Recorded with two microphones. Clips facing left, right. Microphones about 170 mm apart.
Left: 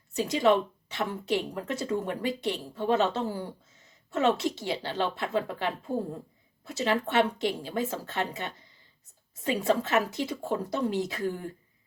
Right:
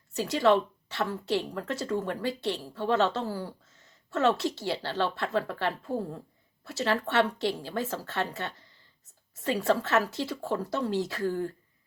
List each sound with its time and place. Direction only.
0.1 s a woman's voice: 15° left (ahead or behind)